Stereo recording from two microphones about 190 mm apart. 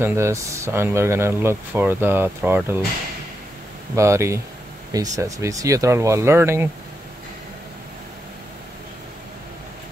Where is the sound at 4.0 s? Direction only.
15° right (ahead or behind).